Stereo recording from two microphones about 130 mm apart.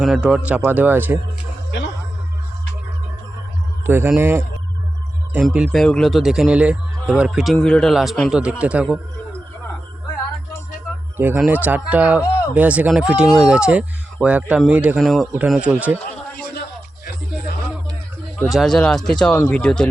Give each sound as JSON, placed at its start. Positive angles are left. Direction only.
{"t": 0.0, "sound": "speech", "side_deg": -5}
{"t": 3.8, "sound": "a man's voice", "side_deg": -15}
{"t": 11.2, "sound": "a man's voice", "side_deg": -15}
{"t": 18.4, "sound": "a man's voice", "side_deg": 0}